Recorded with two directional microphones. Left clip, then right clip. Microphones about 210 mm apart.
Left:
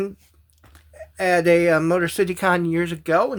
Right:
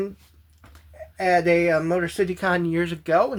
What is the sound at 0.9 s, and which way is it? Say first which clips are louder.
Speech: left 1 dB; 40° left (ahead or behind).